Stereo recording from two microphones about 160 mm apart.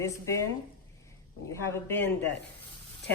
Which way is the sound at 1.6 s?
15° left (ahead or behind).